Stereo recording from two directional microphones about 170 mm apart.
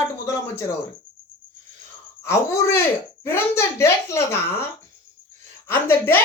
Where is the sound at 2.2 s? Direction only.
15° left (ahead or behind).